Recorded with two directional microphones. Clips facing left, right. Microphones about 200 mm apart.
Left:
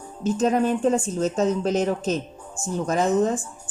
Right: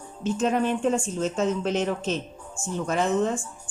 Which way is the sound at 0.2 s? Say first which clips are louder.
Left 3 dB; 40° left (ahead or behind).